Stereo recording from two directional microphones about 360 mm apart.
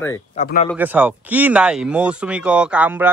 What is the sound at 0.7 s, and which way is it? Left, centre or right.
Speech, centre.